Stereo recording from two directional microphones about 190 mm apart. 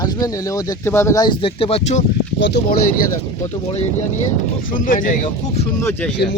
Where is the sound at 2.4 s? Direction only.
70° left (ahead or behind).